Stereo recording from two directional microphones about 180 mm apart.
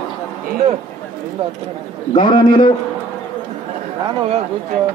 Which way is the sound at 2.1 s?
25° left (ahead or behind).